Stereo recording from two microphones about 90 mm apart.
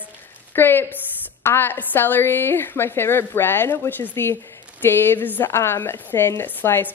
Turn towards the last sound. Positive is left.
turn(degrees=25)  # may be behind; listen again after turning